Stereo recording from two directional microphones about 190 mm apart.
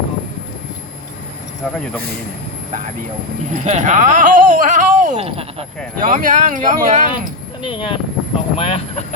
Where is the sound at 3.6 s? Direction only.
40° right (ahead or behind).